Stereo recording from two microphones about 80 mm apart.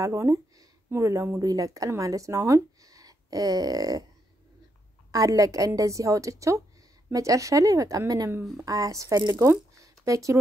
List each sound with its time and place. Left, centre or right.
0.0 s a woman's voice: right
5.1 s a woman's voice: right